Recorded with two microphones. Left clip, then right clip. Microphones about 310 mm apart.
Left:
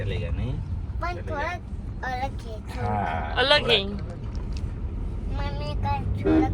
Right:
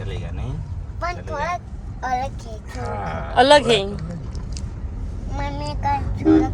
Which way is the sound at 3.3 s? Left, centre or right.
Right.